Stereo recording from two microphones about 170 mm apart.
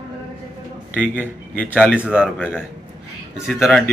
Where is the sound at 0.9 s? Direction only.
10° left (ahead or behind).